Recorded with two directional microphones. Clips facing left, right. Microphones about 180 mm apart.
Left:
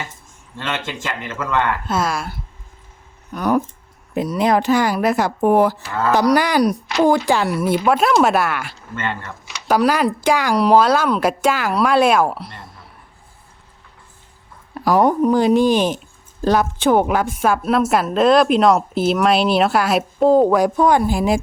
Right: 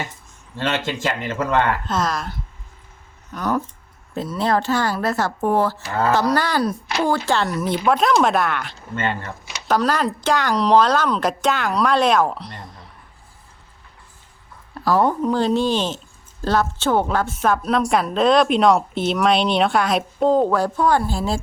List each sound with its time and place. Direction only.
0.6 s speech: 35° right (ahead or behind)
1.9 s speech: 10° left (ahead or behind)
5.9 s speech: 35° right (ahead or behind)
6.3 s speech: 15° left (ahead or behind)
9.0 s speech: 20° right (ahead or behind)
9.6 s speech: 10° left (ahead or behind)
14.8 s a woman's voice: 15° left (ahead or behind)